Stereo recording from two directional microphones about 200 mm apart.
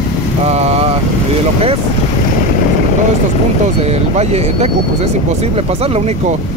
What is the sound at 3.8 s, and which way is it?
Speech, 30° right (ahead or behind).